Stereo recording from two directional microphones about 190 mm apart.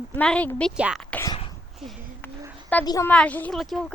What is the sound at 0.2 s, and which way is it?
Speech, 5° left (ahead or behind).